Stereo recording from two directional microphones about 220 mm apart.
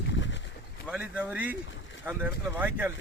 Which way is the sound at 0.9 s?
5° right (ahead or behind).